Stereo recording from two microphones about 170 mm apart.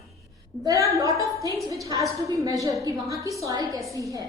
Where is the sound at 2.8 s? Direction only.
20° right (ahead or behind).